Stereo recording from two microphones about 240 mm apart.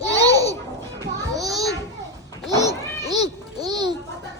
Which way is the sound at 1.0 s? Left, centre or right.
Centre.